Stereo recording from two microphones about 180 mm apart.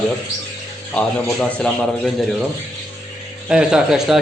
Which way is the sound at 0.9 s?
5° left (ahead or behind).